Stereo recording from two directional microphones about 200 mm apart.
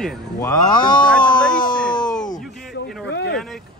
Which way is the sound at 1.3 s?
5° left (ahead or behind).